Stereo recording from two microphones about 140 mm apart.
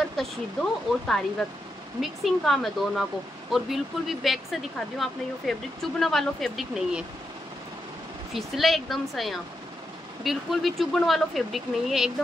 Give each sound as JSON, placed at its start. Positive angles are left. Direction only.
{"t": 0.2, "sound": "speech", "side_deg": 5}
{"t": 8.3, "sound": "speech", "side_deg": 0}